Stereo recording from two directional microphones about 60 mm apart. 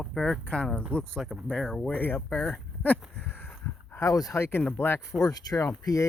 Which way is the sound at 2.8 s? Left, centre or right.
Left.